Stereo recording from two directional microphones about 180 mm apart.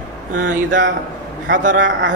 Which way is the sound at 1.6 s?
45° right (ahead or behind).